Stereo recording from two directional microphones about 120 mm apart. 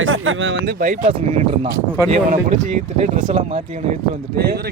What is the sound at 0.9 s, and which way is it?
Speech, 70° right (ahead or behind).